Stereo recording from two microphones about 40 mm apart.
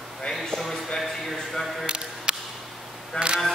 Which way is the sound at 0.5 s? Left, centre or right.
Centre.